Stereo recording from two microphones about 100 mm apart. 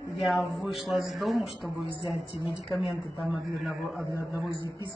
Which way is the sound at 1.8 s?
60° left (ahead or behind).